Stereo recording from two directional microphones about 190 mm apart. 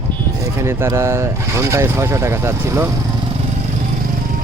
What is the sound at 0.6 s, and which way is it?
Speech, 15° right (ahead or behind).